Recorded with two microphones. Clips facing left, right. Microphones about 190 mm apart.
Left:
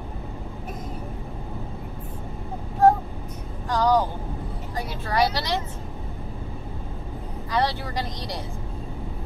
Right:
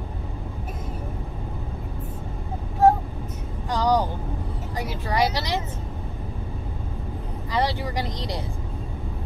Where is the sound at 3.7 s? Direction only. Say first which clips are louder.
Left 1 dB; 15° right (ahead or behind).